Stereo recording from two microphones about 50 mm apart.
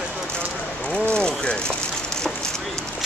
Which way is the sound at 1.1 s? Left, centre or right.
Centre.